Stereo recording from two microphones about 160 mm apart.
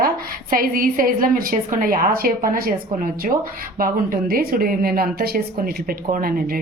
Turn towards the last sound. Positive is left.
turn(degrees=-65)  # may be behind; listen again after turning